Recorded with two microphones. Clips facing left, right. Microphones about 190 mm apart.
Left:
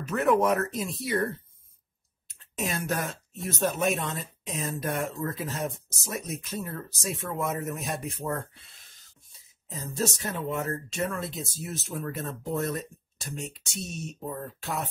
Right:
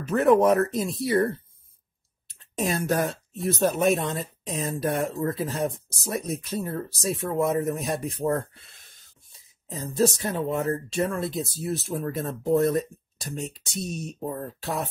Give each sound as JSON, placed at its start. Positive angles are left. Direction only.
{"t": 0.1, "sound": "speech", "side_deg": -35}
{"t": 2.2, "sound": "a sound", "side_deg": -35}
{"t": 3.4, "sound": "speech", "side_deg": -35}
{"t": 9.7, "sound": "speech", "side_deg": -35}